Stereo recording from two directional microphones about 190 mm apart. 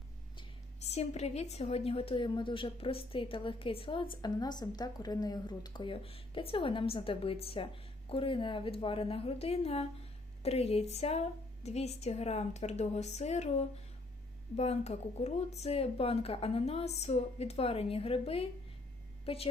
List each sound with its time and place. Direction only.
0.9 s a woman's voice: 35° left (ahead or behind)